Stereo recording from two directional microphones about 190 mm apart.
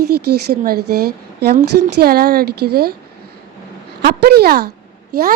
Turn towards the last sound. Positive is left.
turn(degrees=-55)  # may be behind; listen again after turning